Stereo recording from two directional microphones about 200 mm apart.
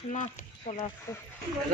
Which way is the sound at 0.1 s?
35° left (ahead or behind).